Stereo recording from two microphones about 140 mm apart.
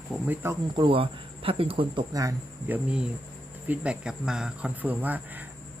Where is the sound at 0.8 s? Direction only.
40° right (ahead or behind).